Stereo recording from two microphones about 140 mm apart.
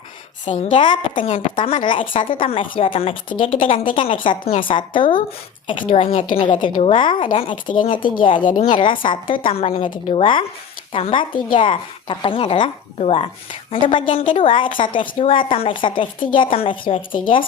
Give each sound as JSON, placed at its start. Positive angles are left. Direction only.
{"t": 0.4, "sound": "a woman's voice", "side_deg": 55}
{"t": 1.4, "sound": "a woman's voice", "side_deg": 40}